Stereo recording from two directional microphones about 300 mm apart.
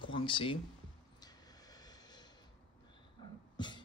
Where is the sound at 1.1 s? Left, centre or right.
Centre.